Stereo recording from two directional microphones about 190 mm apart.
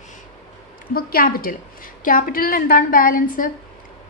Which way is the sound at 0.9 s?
50° left (ahead or behind).